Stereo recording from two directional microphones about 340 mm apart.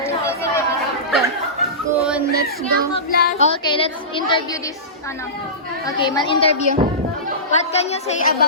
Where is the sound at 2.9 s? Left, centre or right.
Left.